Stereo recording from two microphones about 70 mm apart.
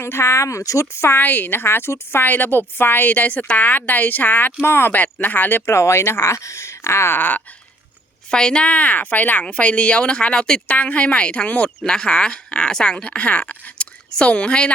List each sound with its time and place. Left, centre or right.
0.0 s speech: left
0.9 s a woman's voice: left
5.7 s speech: left
8.3 s speech: centre